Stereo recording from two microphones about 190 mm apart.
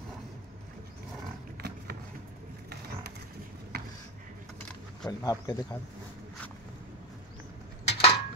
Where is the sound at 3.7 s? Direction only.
55° right (ahead or behind).